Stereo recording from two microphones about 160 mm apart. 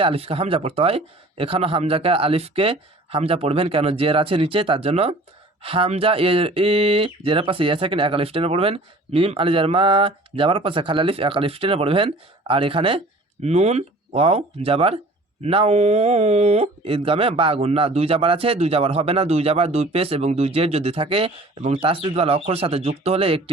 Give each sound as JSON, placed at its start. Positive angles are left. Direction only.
{"t": 0.0, "sound": "speech", "side_deg": -35}